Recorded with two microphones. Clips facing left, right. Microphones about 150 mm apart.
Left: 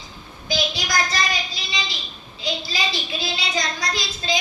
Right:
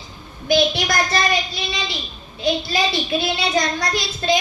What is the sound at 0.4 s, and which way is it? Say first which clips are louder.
Child singing: right 8 dB; 55° right (ahead or behind).